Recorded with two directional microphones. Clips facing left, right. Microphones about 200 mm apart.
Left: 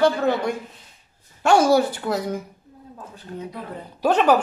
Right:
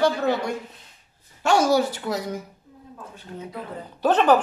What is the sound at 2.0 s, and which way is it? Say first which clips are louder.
Speech: left 3 dB; 55° left (ahead or behind).